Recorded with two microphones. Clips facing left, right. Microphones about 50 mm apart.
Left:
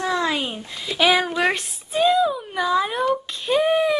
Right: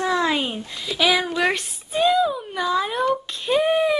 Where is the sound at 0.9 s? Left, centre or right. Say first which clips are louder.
Left 2 dB; left.